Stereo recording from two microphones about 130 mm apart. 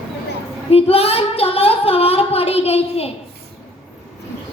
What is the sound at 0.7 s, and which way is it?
Child singing, 50° left (ahead or behind).